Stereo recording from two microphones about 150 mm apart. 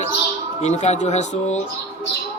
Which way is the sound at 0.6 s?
50° left (ahead or behind).